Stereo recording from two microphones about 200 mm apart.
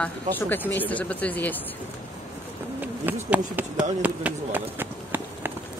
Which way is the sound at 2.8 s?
10° right (ahead or behind).